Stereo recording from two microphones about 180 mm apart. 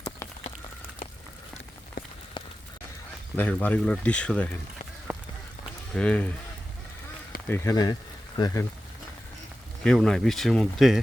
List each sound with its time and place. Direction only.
2.4 s a sound: 25° left (ahead or behind)
3.3 s speech: 10° left (ahead or behind)
5.1 s run: 10° right (ahead or behind)
5.9 s speech: 5° left (ahead or behind)
7.4 s speech: 15° left (ahead or behind)
9.8 s speech: 5° left (ahead or behind)